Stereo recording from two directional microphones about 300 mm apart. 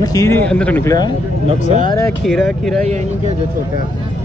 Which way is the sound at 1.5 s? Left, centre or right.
Right.